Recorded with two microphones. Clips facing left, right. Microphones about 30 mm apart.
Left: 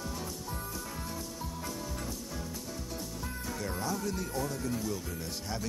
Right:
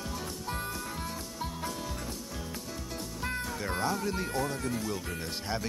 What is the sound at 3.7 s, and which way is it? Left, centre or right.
Speech, right.